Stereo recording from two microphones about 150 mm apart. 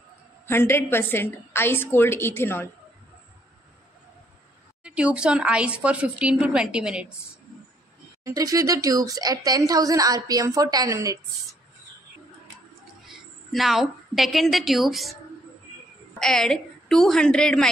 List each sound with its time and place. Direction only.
0.5 s a woman's voice: 15° left (ahead or behind)
4.8 s a woman's voice: 5° right (ahead or behind)
8.2 s speech: 20° right (ahead or behind)
13.0 s a woman's voice: centre (ahead or behind)
16.2 s a woman's voice: 5° left (ahead or behind)